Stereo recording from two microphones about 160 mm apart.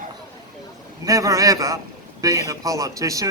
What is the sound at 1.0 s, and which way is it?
A man's voice, 20° right (ahead or behind).